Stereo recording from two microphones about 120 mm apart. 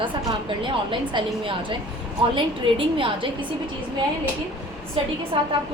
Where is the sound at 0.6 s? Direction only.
45° right (ahead or behind).